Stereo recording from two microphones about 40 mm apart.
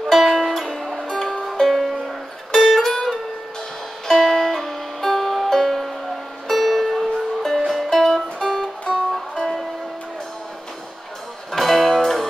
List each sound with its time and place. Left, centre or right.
0.1 s music: centre
11.5 s music: centre